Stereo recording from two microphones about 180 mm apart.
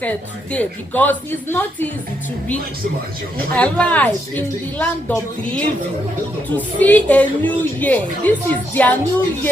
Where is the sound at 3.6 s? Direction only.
5° left (ahead or behind).